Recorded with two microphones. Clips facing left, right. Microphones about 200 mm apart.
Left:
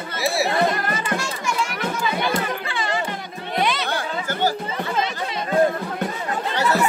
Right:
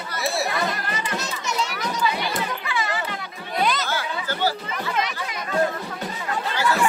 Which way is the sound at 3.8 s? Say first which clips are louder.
Left 2 dB; 50° left (ahead or behind).